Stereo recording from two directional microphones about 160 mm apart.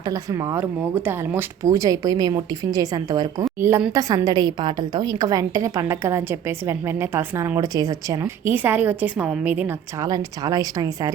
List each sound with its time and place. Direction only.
0.0 s a woman's voice: 20° right (ahead or behind)
10.0 s speech: 25° right (ahead or behind)